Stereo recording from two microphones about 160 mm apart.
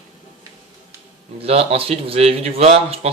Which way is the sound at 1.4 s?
40° right (ahead or behind).